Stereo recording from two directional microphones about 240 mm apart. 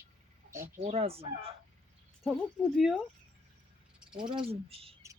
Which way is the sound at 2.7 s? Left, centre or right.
Centre.